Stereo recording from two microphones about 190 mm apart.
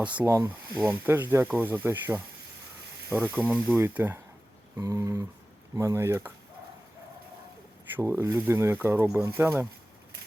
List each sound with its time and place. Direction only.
0.0 s speech: 10° right (ahead or behind)
7.9 s speech: 15° right (ahead or behind)